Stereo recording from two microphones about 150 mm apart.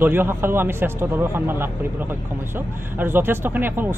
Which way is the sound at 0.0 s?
15° right (ahead or behind).